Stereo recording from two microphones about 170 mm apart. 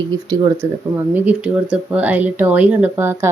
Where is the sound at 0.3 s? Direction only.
15° right (ahead or behind).